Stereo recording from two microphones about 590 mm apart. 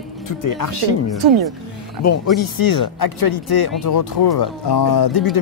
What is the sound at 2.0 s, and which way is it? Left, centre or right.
Speech, left.